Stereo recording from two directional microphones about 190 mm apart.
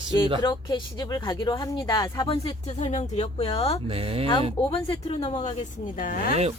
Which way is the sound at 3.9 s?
30° right (ahead or behind).